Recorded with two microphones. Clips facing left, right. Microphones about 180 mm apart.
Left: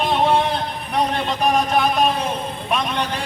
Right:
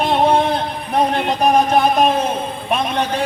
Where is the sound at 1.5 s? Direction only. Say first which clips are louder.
Right 4 dB; 45° right (ahead or behind).